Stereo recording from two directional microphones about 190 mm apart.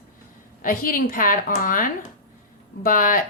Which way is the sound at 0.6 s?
45° left (ahead or behind).